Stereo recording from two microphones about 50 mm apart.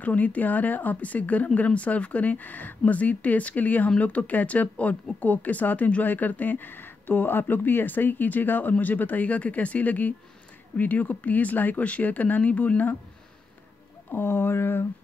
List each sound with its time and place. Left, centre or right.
0.0 s speech: left
14.1 s speech: left